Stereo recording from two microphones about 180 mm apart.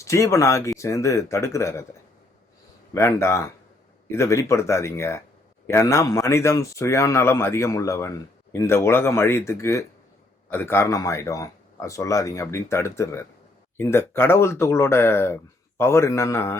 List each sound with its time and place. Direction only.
0.0 s speech: 15° left (ahead or behind)
2.9 s speech: 15° left (ahead or behind)